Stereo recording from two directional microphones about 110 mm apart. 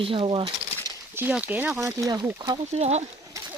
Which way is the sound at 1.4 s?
15° right (ahead or behind).